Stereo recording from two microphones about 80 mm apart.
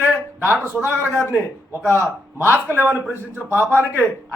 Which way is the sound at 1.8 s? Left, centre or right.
Right.